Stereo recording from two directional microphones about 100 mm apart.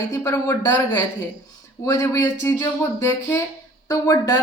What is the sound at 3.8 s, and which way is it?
Speech, 30° left (ahead or behind).